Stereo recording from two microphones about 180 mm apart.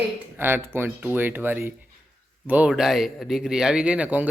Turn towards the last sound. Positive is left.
turn(degrees=-10)  # may be behind; listen again after turning